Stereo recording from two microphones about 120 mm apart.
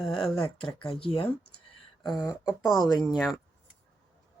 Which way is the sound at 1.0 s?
50° left (ahead or behind).